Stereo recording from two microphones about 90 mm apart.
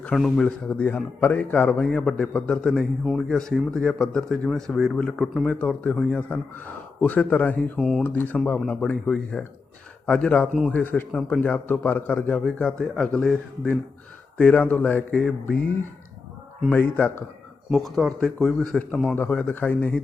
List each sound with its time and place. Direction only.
0.1 s a man's voice: 5° left (ahead or behind)
5.5 s a man's voice: 15° left (ahead or behind)
7.8 s speech: centre (ahead or behind)
8.0 s a man's voice: 20° left (ahead or behind)
16.6 s a man's voice: 15° left (ahead or behind)
17.7 s a man's voice: centre (ahead or behind)